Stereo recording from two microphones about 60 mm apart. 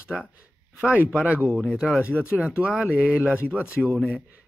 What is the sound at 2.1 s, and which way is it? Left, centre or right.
Speech, left.